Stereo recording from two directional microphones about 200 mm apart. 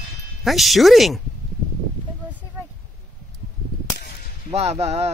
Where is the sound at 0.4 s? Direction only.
Centre (ahead or behind).